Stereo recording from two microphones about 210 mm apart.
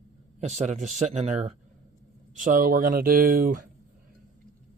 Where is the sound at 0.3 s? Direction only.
35° right (ahead or behind).